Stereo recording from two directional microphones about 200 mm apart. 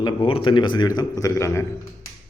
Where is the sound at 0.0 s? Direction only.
25° left (ahead or behind).